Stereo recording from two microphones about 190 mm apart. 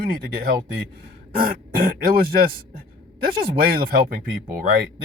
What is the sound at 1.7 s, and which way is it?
Speech, 50° right (ahead or behind).